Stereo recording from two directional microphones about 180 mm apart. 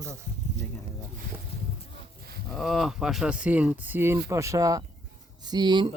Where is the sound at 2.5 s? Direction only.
Centre (ahead or behind).